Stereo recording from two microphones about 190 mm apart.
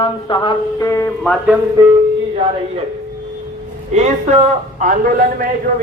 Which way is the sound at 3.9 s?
35° right (ahead or behind).